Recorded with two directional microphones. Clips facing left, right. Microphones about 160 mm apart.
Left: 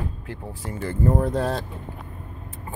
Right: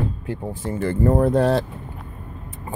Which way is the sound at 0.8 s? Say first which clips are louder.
Right 4 dB; 60° right (ahead or behind).